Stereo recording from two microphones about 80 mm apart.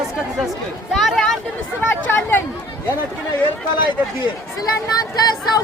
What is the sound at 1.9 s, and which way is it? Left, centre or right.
Speech, left.